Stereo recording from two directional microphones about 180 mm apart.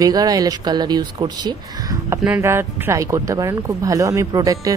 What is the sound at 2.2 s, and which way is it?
A woman's voice, 10° right (ahead or behind).